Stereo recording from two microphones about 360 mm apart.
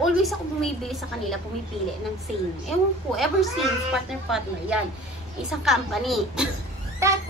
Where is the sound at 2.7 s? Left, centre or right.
Centre.